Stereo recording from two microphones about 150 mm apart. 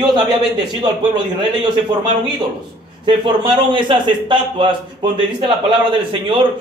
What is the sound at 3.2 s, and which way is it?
A man's voice, 30° right (ahead or behind).